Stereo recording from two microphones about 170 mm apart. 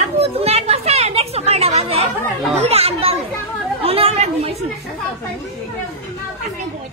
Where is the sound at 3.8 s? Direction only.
35° right (ahead or behind).